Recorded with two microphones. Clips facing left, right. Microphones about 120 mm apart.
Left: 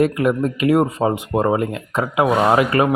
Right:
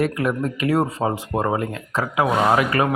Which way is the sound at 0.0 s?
20° left (ahead or behind).